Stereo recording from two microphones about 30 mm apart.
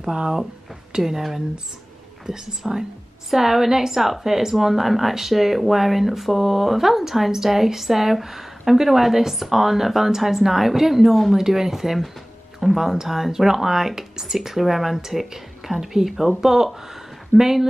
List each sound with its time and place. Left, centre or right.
1.0 s speech: centre